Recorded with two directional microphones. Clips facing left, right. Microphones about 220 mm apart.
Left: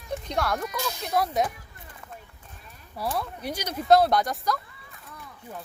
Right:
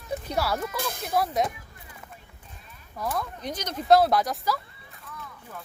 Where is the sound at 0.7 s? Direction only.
55° right (ahead or behind).